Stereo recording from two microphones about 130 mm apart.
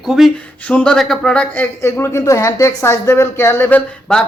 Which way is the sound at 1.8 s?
20° left (ahead or behind).